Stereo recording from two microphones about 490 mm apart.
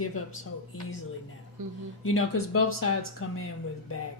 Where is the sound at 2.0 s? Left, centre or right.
Left.